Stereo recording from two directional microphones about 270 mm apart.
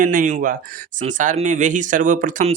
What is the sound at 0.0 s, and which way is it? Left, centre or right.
Speech, right.